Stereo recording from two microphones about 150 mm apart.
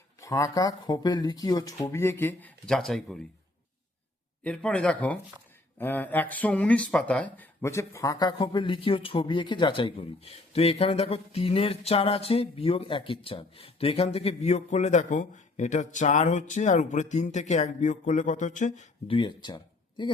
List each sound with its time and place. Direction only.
0.2 s speech: 20° left (ahead or behind); by 3.2 s 5° left (ahead or behind)
4.4 s speech: 5° left (ahead or behind); by 18.9 s 55° left (ahead or behind)
19.0 s speech: 35° left (ahead or behind)